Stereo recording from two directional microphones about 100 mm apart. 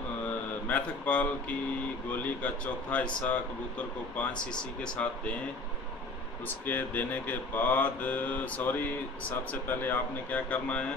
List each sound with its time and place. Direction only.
0.7 s speech: 15° left (ahead or behind)
6.4 s speech: 20° left (ahead or behind)